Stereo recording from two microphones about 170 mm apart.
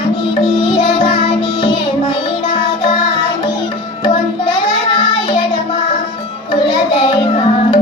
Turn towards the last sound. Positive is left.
turn(degrees=30)  # may be behind; listen again after turning